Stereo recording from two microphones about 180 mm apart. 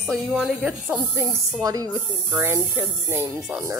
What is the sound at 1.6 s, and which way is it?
Speech, 20° right (ahead or behind).